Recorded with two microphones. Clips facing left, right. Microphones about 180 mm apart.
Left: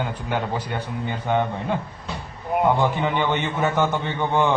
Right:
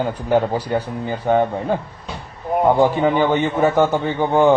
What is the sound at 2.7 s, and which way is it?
Speech, 35° right (ahead or behind).